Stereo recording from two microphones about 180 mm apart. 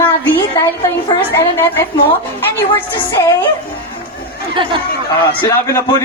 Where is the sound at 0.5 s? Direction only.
15° left (ahead or behind).